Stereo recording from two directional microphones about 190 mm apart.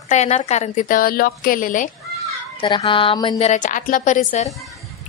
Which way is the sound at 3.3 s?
40° left (ahead or behind).